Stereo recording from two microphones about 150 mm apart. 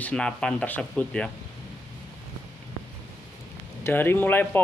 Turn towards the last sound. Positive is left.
turn(degrees=15)  # may be behind; listen again after turning